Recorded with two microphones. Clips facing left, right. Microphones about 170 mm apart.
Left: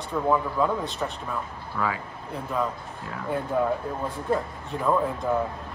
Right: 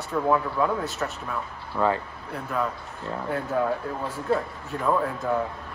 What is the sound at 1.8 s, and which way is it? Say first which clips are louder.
Speech: right 5 dB; 20° right (ahead or behind).